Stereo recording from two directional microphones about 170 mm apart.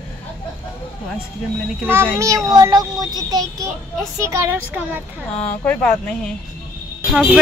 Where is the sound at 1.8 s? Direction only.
15° right (ahead or behind).